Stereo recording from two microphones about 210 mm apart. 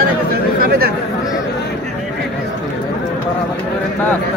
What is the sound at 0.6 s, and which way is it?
Chatter, 45° right (ahead or behind).